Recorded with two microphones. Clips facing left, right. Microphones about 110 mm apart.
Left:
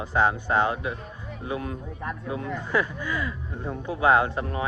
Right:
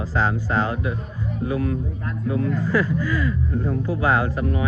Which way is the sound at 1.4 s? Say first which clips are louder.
Right 7 dB; 25° left (ahead or behind).